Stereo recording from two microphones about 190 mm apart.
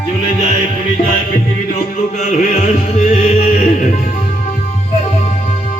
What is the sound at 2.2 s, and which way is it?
Music, 40° left (ahead or behind).